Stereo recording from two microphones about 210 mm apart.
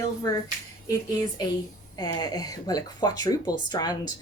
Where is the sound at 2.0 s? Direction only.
20° left (ahead or behind).